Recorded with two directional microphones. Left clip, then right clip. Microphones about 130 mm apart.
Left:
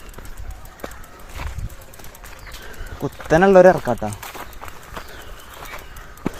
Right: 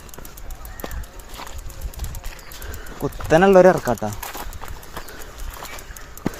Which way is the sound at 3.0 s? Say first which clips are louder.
Even; 15° left (ahead or behind).